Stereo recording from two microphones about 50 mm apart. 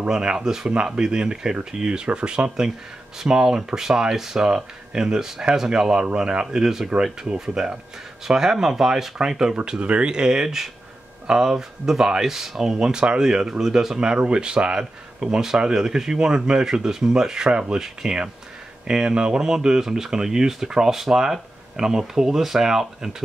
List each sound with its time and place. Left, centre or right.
0.1 s speech: centre